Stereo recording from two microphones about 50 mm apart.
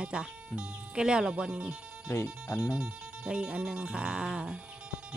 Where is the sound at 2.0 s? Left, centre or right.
Left.